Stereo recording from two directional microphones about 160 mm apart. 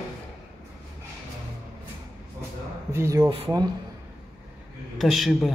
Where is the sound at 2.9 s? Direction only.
15° right (ahead or behind).